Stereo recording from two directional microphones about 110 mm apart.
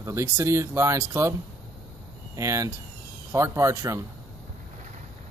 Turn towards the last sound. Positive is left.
turn(degrees=-30)  # may be behind; listen again after turning